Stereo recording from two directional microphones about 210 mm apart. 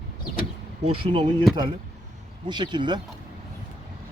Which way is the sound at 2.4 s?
20° right (ahead or behind).